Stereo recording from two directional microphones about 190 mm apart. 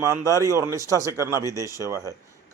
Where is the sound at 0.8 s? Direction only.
15° left (ahead or behind).